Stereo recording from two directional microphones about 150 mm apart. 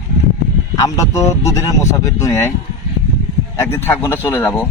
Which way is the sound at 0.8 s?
20° left (ahead or behind).